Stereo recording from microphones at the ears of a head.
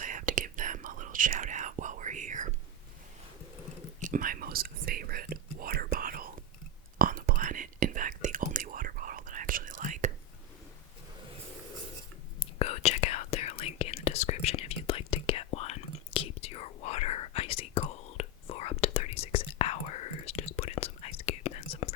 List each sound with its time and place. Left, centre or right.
0.0 s whispering: right
4.1 s whispering: right
12.4 s whispering: left